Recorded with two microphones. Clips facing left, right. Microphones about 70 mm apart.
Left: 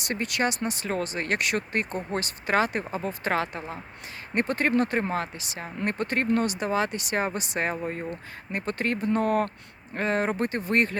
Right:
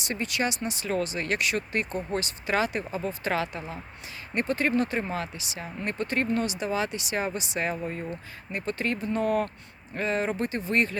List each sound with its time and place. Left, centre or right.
0.0 s speech: left